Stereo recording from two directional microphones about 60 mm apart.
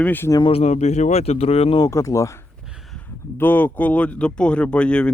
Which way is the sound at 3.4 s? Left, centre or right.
Left.